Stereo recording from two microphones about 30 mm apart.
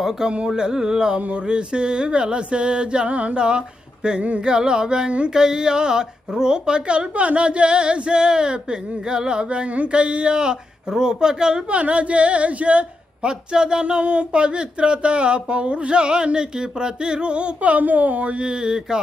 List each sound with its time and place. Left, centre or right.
0.6 s speech: right
3.3 s speech: right
7.2 s speech: right
11.7 s a sound: right
13.2 s speech: right
18.4 s speech: right